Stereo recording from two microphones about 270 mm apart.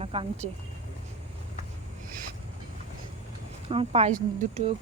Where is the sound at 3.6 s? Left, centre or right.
Centre.